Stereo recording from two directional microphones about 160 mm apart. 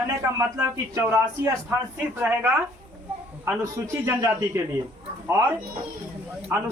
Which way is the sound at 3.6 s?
15° right (ahead or behind).